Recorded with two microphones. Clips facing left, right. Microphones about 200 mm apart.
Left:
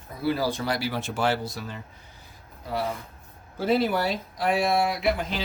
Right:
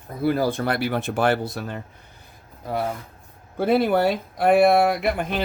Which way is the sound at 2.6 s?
50° right (ahead or behind).